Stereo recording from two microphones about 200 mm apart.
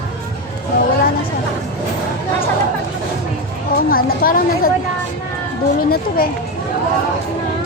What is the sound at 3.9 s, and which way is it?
Speech, 45° left (ahead or behind).